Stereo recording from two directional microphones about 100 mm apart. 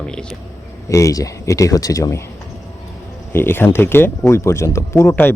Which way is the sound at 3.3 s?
25° left (ahead or behind).